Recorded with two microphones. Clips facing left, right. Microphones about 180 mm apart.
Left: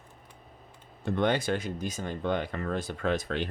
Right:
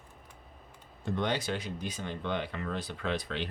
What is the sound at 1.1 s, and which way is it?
Speech, 55° left (ahead or behind).